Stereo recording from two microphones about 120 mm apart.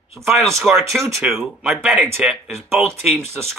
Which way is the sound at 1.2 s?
20° right (ahead or behind).